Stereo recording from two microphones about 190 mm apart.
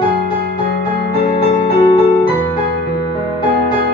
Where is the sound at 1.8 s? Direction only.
25° left (ahead or behind).